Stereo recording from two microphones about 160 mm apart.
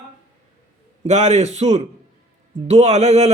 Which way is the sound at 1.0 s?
45° right (ahead or behind).